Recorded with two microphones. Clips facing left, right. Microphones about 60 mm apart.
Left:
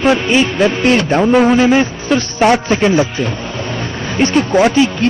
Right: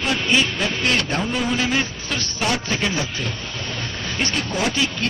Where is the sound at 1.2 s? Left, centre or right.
Left.